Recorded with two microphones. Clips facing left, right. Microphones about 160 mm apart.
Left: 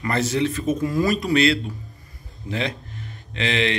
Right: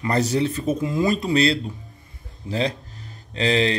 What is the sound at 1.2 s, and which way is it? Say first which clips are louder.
Speech: left 1 dB; 30° right (ahead or behind).